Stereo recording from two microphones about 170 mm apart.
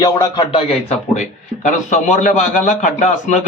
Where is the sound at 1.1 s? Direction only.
45° left (ahead or behind).